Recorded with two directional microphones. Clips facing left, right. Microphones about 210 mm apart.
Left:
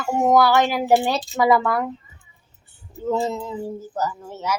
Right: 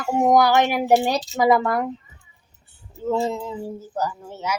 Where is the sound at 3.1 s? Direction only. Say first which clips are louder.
Even; 10° right (ahead or behind).